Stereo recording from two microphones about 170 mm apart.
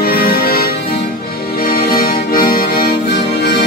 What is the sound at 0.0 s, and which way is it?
Music, 65° left (ahead or behind).